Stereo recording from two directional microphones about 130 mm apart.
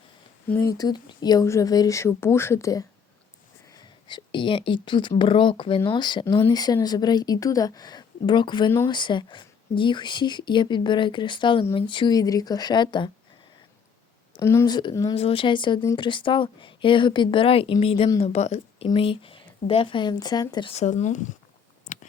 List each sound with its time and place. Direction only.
0.4 s speech: 15° left (ahead or behind)
0.7 s speech: 30° left (ahead or behind)
3.8 s speech: 35° left (ahead or behind)
6.2 s speech: 20° left (ahead or behind)
6.5 s speech: 30° left (ahead or behind)
14.4 s speech: 20° left (ahead or behind)
14.7 s speech: 35° left (ahead or behind)
15.1 s speech: 50° left (ahead or behind)
18.9 s speech: 45° left (ahead or behind)
20.7 s speech: 65° left (ahead or behind)
21.9 s chewing: 90° left